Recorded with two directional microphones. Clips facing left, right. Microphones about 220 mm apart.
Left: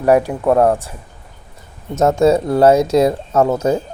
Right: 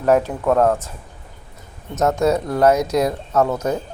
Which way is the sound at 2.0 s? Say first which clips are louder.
Left 5 dB; 30° left (ahead or behind).